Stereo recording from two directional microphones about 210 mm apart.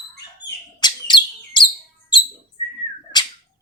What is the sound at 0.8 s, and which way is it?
Bird, 20° left (ahead or behind).